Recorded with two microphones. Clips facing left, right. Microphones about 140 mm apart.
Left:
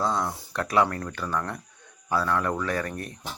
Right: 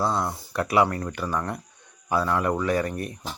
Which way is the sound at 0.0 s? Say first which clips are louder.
Right 1 dB; 10° right (ahead or behind).